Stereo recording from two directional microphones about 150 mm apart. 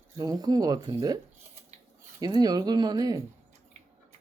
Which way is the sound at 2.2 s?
25° right (ahead or behind).